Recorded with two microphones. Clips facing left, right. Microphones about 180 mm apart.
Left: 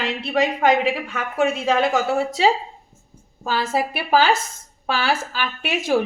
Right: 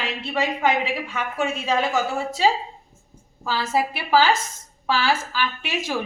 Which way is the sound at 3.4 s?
55° left (ahead or behind).